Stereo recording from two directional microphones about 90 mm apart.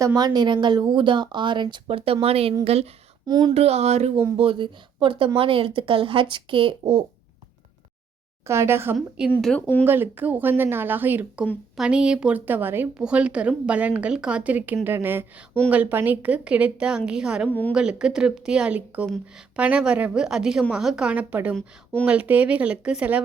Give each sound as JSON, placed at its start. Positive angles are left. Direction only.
{"t": 0.0, "sound": "speech", "side_deg": -45}
{"t": 3.2, "sound": "speech", "side_deg": -50}
{"t": 4.4, "sound": "speech", "side_deg": -75}
{"t": 8.4, "sound": "a woman's voice", "side_deg": -30}
{"t": 9.0, "sound": "a woman's voice", "side_deg": -10}
{"t": 9.6, "sound": "speech", "side_deg": 20}
{"t": 9.8, "sound": "a woman's voice", "side_deg": -25}
{"t": 11.8, "sound": "a woman's voice", "side_deg": -10}
{"t": 13.0, "sound": "a woman's voice", "side_deg": -10}